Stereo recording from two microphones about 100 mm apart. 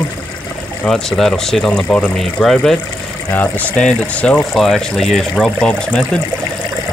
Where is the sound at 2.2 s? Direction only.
5° left (ahead or behind).